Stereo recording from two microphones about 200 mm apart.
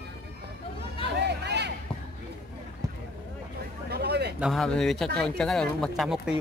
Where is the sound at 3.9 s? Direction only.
55° right (ahead or behind).